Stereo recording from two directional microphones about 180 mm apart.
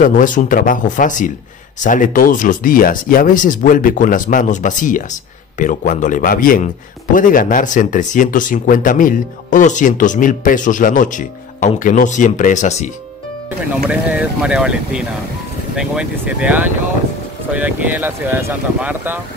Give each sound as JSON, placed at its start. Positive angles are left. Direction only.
{"t": 0.0, "sound": "speech", "side_deg": 45}
{"t": 13.8, "sound": "speech", "side_deg": -5}